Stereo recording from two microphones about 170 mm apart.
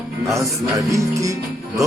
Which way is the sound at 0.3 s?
20° right (ahead or behind).